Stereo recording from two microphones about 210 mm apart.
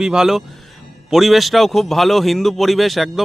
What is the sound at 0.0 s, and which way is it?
A man's voice, 5° right (ahead or behind).